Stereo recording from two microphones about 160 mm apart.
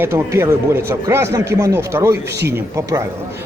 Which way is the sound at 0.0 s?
15° right (ahead or behind).